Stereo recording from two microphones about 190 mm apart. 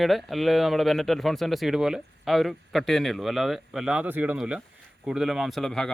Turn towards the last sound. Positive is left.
turn(degrees=0)  # may be behind; listen again after turning